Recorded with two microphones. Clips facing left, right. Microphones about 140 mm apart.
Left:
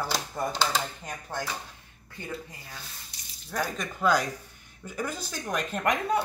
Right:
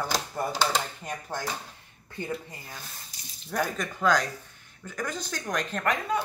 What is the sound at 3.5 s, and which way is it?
Speech, centre (ahead or behind).